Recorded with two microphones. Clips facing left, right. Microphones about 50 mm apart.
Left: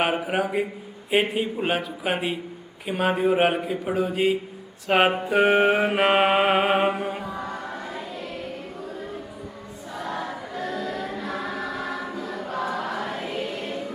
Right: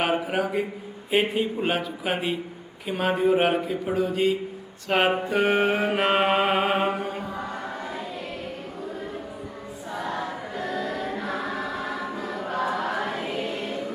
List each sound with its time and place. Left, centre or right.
0.0 s a man's voice: centre
5.1 s mantra: centre
9.9 s choir: centre
12.1 s choir: centre
13.2 s choir: centre